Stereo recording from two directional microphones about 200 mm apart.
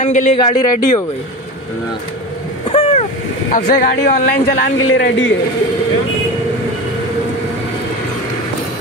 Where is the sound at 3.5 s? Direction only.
40° left (ahead or behind).